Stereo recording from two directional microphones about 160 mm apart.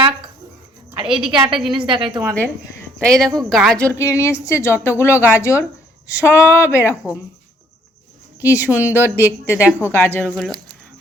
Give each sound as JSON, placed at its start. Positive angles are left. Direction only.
{"t": 1.1, "sound": "a woman's voice", "side_deg": -30}
{"t": 1.5, "sound": "speech", "side_deg": -5}
{"t": 1.8, "sound": "a woman's voice", "side_deg": -30}
{"t": 3.0, "sound": "speech", "side_deg": 0}
{"t": 8.4, "sound": "a woman's voice", "side_deg": 20}
{"t": 8.7, "sound": "speech", "side_deg": -10}
{"t": 9.8, "sound": "speech", "side_deg": 15}
{"t": 10.2, "sound": "speech", "side_deg": 0}